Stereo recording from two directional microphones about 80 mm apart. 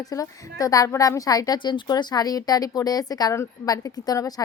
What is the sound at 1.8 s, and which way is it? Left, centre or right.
A woman's voice, left.